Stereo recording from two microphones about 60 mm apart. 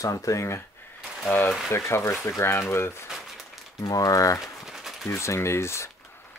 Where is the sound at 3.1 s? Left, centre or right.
Centre.